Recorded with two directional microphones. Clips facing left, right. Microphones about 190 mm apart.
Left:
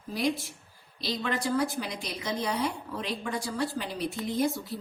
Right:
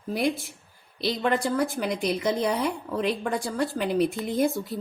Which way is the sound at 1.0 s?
55° right (ahead or behind).